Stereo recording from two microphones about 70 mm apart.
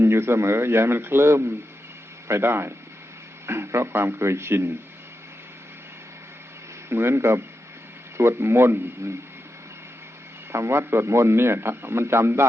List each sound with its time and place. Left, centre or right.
0.0 s a man's voice: right
6.9 s a man's voice: right
10.5 s a man's voice: right